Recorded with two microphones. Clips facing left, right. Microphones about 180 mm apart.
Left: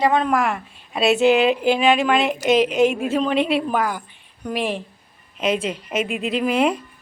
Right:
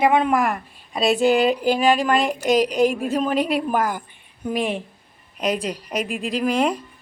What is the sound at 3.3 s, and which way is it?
Speech, 40° right (ahead or behind).